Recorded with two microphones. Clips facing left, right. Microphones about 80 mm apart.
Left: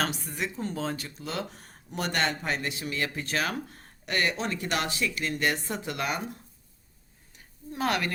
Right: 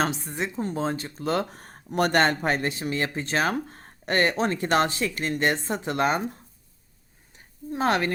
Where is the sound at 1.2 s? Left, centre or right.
Right.